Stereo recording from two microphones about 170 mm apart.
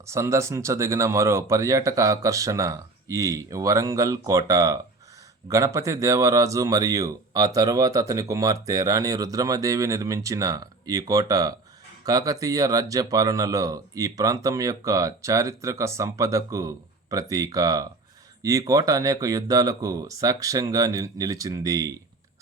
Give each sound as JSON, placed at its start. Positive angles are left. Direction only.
{"t": 0.0, "sound": "speech", "side_deg": -15}